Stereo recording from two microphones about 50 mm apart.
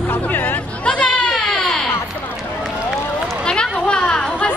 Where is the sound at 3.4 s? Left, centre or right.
Centre.